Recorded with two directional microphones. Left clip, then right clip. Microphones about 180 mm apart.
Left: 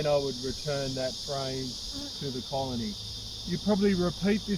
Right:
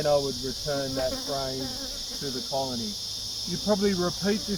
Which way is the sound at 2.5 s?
5° left (ahead or behind).